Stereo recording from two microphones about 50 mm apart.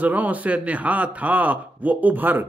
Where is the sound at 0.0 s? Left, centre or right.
Right.